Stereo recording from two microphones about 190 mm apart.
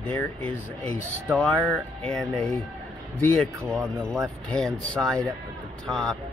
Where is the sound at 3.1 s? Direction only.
15° right (ahead or behind).